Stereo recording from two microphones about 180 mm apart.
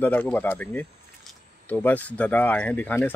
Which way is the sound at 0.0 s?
10° left (ahead or behind).